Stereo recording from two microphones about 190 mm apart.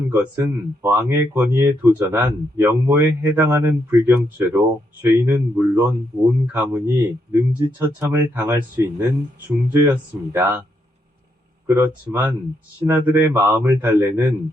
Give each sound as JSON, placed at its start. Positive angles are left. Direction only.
{"t": 0.1, "sound": "speech", "side_deg": -10}
{"t": 11.6, "sound": "speech", "side_deg": -10}